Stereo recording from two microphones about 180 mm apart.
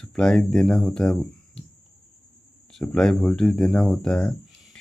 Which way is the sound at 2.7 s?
5° left (ahead or behind).